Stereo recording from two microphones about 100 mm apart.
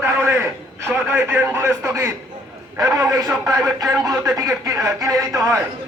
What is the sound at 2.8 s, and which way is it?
Speech, 35° right (ahead or behind).